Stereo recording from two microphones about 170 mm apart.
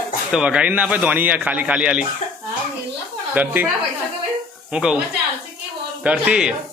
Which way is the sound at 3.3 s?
10° right (ahead or behind).